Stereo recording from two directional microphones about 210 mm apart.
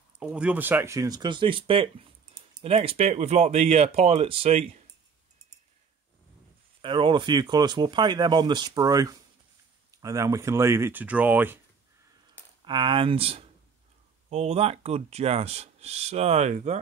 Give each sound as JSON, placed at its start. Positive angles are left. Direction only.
{"t": 0.2, "sound": "speech", "side_deg": -5}
{"t": 6.8, "sound": "speech", "side_deg": -25}
{"t": 12.6, "sound": "speech", "side_deg": -20}